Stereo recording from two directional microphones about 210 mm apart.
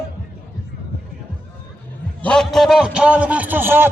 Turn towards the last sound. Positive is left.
turn(degrees=-10)  # may be behind; listen again after turning